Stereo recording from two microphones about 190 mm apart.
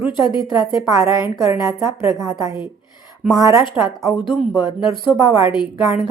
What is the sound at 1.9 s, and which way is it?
Speech, 25° left (ahead or behind).